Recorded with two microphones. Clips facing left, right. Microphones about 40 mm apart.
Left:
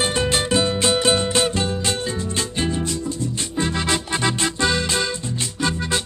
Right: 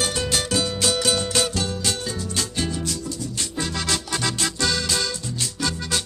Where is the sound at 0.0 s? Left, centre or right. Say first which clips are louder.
Left 4 dB; left.